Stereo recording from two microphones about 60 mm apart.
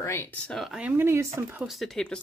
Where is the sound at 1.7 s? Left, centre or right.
Centre.